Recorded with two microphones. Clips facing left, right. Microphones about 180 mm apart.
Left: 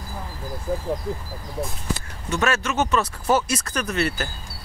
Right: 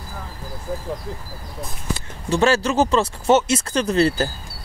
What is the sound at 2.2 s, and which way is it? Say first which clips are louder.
Speech: right 6 dB; 30° right (ahead or behind).